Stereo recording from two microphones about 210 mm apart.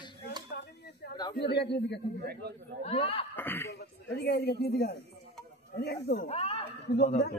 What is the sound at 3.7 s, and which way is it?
Speech, 50° left (ahead or behind).